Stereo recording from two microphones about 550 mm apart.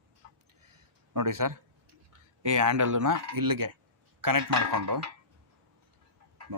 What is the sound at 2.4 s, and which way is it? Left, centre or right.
Speech, right.